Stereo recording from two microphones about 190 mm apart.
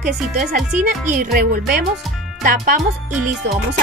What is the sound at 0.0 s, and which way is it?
Speech, 40° right (ahead or behind).